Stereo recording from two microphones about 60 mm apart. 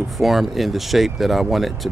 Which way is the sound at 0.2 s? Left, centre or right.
Centre.